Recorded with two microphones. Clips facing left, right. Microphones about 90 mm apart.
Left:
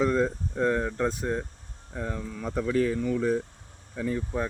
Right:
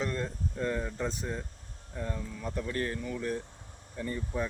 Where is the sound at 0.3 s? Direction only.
90° left.